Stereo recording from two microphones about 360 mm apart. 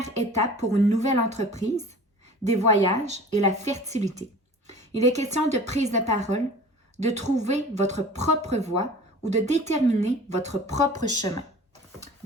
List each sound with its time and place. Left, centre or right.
0.0 s a woman's voice: centre